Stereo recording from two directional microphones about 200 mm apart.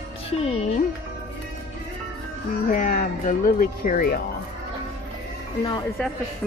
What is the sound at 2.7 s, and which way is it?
Speech, 40° left (ahead or behind).